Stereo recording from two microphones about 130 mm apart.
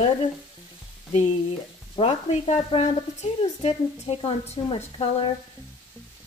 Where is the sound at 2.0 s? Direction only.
50° left (ahead or behind).